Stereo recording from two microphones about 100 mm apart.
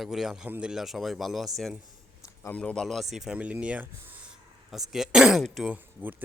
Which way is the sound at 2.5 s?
10° left (ahead or behind).